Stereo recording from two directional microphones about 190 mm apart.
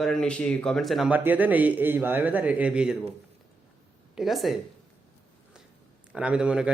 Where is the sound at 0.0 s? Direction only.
5° left (ahead or behind).